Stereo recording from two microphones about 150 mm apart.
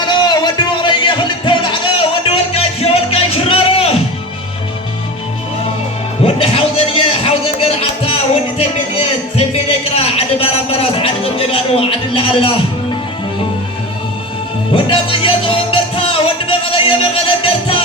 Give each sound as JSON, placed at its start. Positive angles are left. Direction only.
{"t": 0.0, "sound": "music", "side_deg": 30}
{"t": 6.2, "sound": "music", "side_deg": 40}
{"t": 9.9, "sound": "a sound", "side_deg": 40}
{"t": 14.7, "sound": "music", "side_deg": 35}